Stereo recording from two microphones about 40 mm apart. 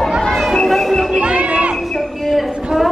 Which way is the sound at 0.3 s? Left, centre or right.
Centre.